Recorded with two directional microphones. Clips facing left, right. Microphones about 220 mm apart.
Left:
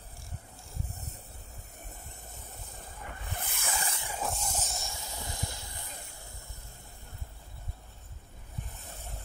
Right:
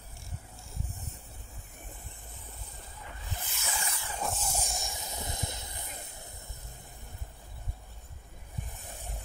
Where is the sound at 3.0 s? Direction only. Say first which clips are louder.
Left 2 dB; 55° left (ahead or behind).